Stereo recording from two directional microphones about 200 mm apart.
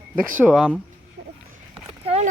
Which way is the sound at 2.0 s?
30° right (ahead or behind).